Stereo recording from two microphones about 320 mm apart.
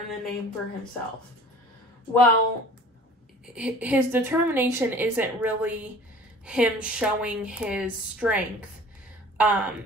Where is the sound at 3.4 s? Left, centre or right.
Centre.